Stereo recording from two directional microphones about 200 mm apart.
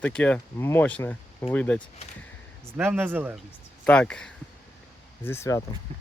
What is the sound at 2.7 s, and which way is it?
Speech, 10° right (ahead or behind).